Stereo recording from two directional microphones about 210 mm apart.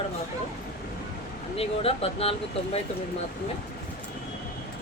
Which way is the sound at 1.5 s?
25° left (ahead or behind).